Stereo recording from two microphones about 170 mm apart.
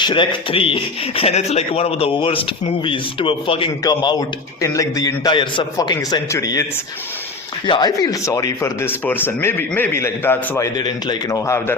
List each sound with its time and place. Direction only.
0.0 s a man's voice: 25° left (ahead or behind)
7.7 s speech: 25° left (ahead or behind)
10.8 s a man's voice: 25° left (ahead or behind)